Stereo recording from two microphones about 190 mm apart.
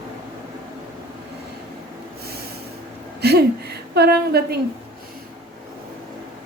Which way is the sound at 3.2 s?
60° right (ahead or behind).